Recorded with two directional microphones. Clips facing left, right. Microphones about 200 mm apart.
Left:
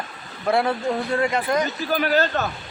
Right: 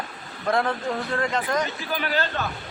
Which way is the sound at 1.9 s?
45° left (ahead or behind).